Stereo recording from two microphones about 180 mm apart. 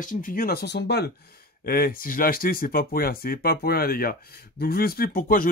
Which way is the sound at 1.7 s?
55° left (ahead or behind).